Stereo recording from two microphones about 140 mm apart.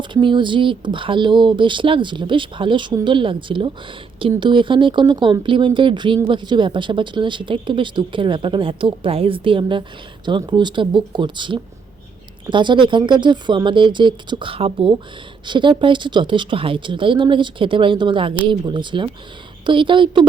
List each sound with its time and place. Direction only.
0.0 s speech: 35° right (ahead or behind)